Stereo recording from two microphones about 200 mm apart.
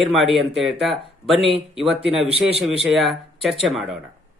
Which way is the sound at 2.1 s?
30° right (ahead or behind).